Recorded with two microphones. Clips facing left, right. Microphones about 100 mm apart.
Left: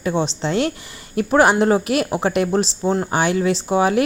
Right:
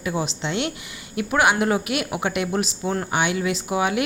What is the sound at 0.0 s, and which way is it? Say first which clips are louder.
A woman's voice: left 5 dB; 30° left (ahead or behind).